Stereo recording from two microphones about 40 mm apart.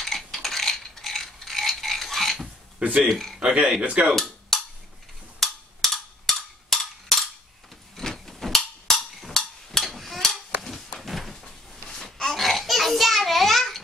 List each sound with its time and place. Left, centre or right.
0.0 s mechanisms: centre
3.0 s speech: centre
3.8 s speech: right
4.1 s cap gun: centre
5.4 s a sound: centre
11.4 s a sound: centre